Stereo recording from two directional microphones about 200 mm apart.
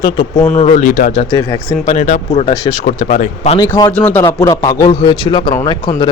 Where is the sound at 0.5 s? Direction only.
35° left (ahead or behind).